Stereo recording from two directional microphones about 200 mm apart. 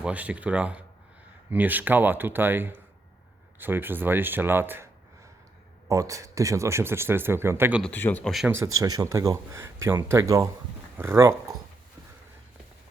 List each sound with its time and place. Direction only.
0.0 s speech: 5° right (ahead or behind)
5.9 s speech: 15° right (ahead or behind)
7.8 s speech: 10° left (ahead or behind)
8.5 s speech: 15° right (ahead or behind)